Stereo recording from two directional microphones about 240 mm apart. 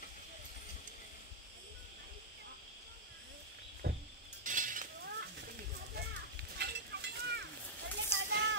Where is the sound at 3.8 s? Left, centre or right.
Right.